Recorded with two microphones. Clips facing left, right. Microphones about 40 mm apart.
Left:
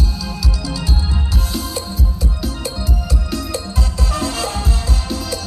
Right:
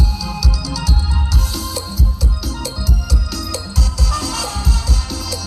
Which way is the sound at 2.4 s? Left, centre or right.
Left.